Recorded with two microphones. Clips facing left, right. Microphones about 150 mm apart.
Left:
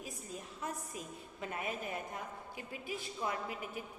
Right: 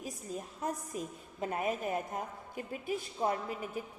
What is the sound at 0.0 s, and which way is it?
A woman's voice, 40° right (ahead or behind).